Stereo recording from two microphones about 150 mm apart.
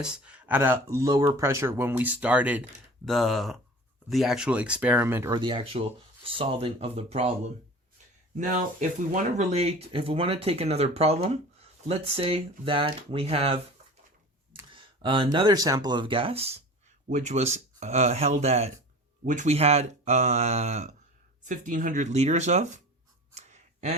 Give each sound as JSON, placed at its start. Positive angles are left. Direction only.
{"t": 0.0, "sound": "speech", "side_deg": -5}
{"t": 3.1, "sound": "speech", "side_deg": 0}
{"t": 5.3, "sound": "speech", "side_deg": -30}
{"t": 8.4, "sound": "speech", "side_deg": -60}
{"t": 9.4, "sound": "speech", "side_deg": -45}
{"t": 14.7, "sound": "speech", "side_deg": -35}
{"t": 19.2, "sound": "speech", "side_deg": -55}
{"t": 21.4, "sound": "speech", "side_deg": -60}
{"t": 23.3, "sound": "a sound", "side_deg": -50}